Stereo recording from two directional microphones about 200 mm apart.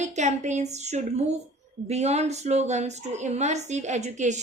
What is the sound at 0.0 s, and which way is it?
A woman's voice, 35° right (ahead or behind).